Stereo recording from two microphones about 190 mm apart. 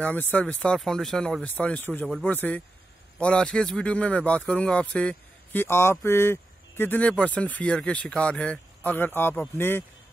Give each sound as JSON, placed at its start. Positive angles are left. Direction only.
{"t": 0.0, "sound": "speech", "side_deg": 10}